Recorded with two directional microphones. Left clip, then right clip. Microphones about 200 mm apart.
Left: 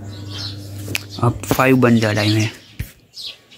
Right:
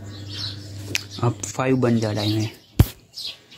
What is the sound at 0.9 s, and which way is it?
Speech, centre (ahead or behind).